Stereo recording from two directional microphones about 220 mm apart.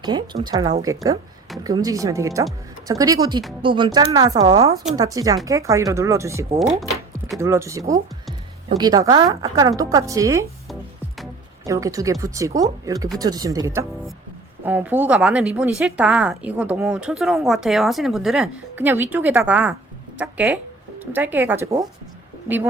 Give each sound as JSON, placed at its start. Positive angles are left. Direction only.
{"t": 0.0, "sound": "speech", "side_deg": -20}
{"t": 6.6, "sound": "a woman's voice", "side_deg": 0}
{"t": 7.3, "sound": "speech", "side_deg": -15}
{"t": 11.6, "sound": "a woman's voice", "side_deg": -15}